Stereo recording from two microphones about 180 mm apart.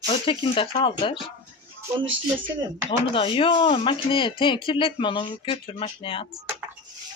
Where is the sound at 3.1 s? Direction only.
30° left (ahead or behind).